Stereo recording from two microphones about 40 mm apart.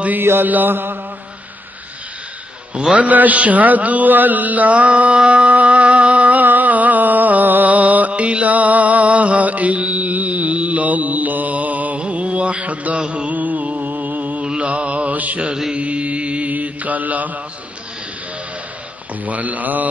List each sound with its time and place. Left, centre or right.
0.2 s mantra: right
0.5 s mantra: right
2.9 s mantra: right
5.2 s music: right
8.1 s mantra: right
19.2 s speech: right